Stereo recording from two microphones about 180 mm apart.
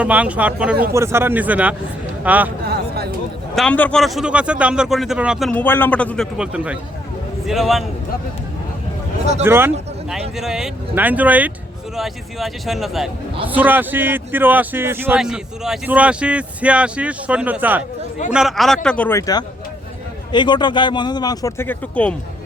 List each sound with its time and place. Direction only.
0.0 s a man's voice: 10° right (ahead or behind)
2.6 s a sound: 65° right (ahead or behind)
3.5 s a man's voice: 5° left (ahead or behind)
6.3 s a man's voice: 5° right (ahead or behind)
9.4 s a man's voice: 10° right (ahead or behind)
10.1 s a man's voice: centre (ahead or behind)